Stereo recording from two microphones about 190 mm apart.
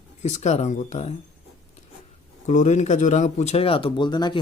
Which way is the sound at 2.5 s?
40° left (ahead or behind).